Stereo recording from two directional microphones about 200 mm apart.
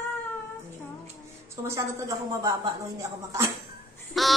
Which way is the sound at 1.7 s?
15° right (ahead or behind).